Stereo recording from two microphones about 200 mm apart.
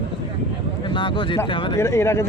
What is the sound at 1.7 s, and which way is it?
Speech, 15° left (ahead or behind).